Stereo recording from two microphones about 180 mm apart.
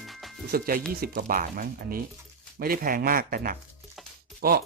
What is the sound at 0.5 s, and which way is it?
Speech, 55° right (ahead or behind).